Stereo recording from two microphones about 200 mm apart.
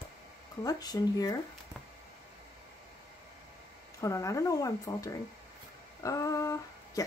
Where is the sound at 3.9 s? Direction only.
15° left (ahead or behind).